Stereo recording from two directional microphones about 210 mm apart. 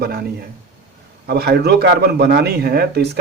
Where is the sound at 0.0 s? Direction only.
45° right (ahead or behind).